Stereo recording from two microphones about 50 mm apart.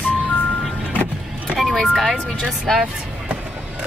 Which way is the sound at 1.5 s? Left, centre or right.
Centre.